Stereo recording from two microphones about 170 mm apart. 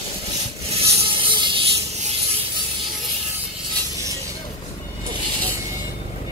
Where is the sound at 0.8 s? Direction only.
30° right (ahead or behind).